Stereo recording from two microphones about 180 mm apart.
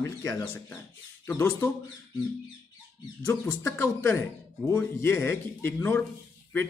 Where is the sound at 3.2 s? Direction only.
15° left (ahead or behind).